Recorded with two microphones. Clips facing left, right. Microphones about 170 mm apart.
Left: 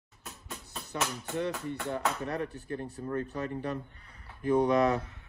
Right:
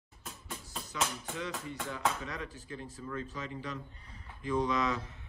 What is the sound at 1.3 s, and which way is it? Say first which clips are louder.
Speech: left 6 dB; 60° left (ahead or behind).